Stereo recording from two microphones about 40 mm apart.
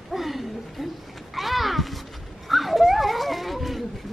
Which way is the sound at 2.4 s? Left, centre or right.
Centre.